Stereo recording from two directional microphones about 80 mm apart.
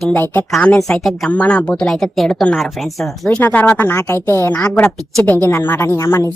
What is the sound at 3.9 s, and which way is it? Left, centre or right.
Speech, left.